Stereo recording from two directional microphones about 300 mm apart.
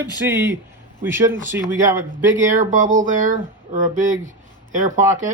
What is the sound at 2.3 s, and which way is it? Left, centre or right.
Speech, right.